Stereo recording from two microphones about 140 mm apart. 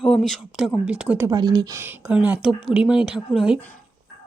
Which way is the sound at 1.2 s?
30° right (ahead or behind).